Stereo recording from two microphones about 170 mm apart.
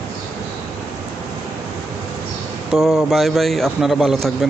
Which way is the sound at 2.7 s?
Centre (ahead or behind).